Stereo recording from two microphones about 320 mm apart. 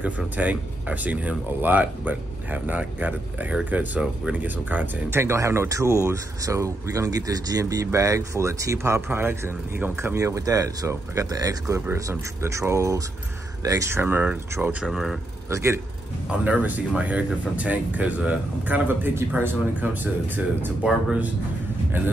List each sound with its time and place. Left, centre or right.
0.0 s speech: centre